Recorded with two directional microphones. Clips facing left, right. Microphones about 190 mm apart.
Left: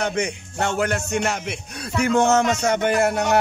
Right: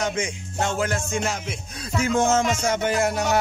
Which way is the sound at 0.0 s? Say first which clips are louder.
Left 2 dB; 60° left (ahead or behind).